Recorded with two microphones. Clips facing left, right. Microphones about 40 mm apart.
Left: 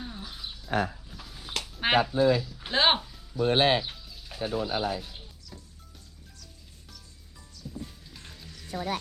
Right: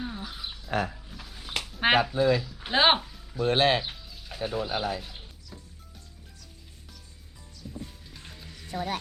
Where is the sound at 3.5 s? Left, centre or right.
Right.